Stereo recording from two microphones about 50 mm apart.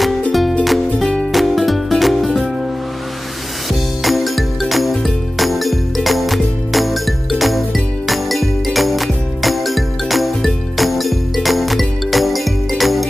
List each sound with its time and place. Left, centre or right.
0.3 s music: centre
1.0 s music: centre
1.3 s music: centre
4.0 s music: centre